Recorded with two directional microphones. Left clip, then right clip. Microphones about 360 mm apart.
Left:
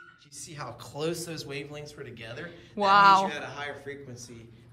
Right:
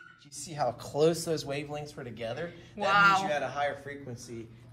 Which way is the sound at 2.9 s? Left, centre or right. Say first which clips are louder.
Left 4 dB; centre.